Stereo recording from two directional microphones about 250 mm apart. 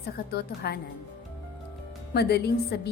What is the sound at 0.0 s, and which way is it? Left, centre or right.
Speech, left.